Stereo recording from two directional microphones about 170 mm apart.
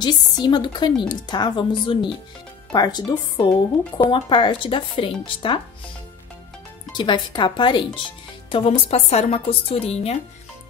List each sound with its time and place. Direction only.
0.0 s speech: 25° left (ahead or behind)
6.9 s a woman's voice: 25° left (ahead or behind)